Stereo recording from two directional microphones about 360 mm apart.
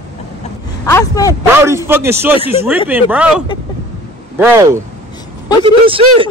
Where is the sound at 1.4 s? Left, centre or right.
Centre.